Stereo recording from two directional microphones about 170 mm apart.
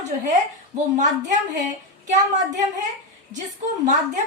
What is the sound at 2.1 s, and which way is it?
Speech, 45° right (ahead or behind).